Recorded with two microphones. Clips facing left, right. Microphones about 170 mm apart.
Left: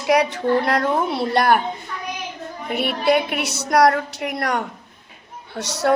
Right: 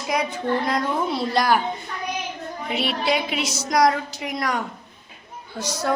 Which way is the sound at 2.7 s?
55° left (ahead or behind).